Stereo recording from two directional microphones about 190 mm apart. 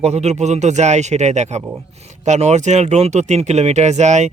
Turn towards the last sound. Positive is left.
turn(degrees=-40)  # may be behind; listen again after turning